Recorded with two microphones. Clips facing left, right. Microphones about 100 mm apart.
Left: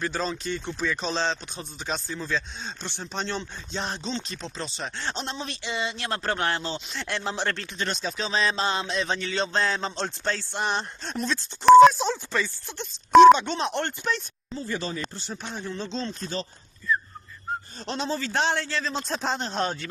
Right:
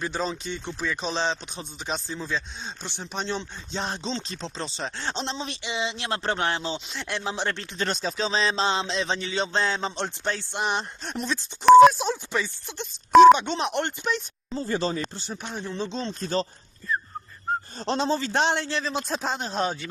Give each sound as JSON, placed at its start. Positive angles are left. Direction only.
{"t": 0.0, "sound": "a man's voice", "side_deg": -15}
{"t": 3.7, "sound": "a man's voice", "side_deg": -30}
{"t": 7.5, "sound": "a man's voice", "side_deg": -30}
{"t": 14.5, "sound": "speech", "side_deg": -30}
{"t": 15.2, "sound": "a man's voice", "side_deg": -15}
{"t": 16.3, "sound": "speech", "side_deg": -45}
{"t": 17.7, "sound": "a man's voice", "side_deg": -30}